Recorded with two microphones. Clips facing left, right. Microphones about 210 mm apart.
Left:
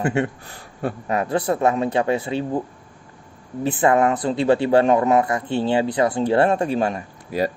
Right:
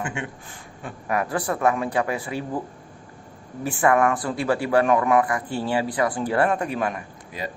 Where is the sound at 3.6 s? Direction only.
20° left (ahead or behind).